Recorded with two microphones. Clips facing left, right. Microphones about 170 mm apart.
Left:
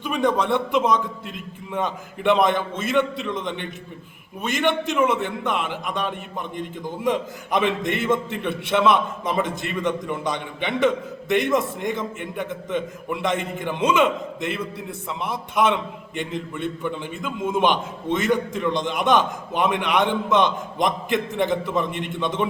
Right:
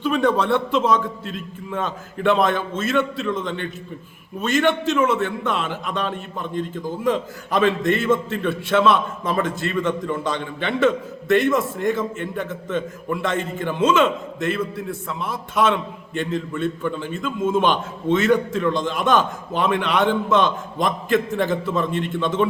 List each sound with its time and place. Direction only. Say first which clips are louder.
0.0 s a man's voice: right 2 dB; 15° left (ahead or behind)